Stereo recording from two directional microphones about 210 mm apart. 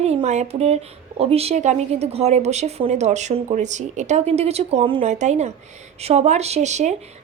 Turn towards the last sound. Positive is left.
turn(degrees=-35)  # may be behind; listen again after turning